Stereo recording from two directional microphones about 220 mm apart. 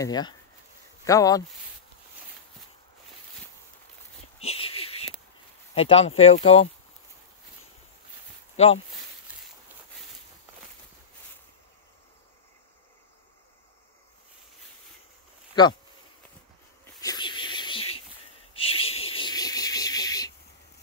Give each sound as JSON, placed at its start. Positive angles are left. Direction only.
{"t": 0.0, "sound": "speech", "side_deg": 20}
{"t": 4.4, "sound": "a sound", "side_deg": 25}
{"t": 5.8, "sound": "speech", "side_deg": 25}
{"t": 8.6, "sound": "speech", "side_deg": 30}
{"t": 16.8, "sound": "snake", "side_deg": 15}
{"t": 18.5, "sound": "a sound", "side_deg": 25}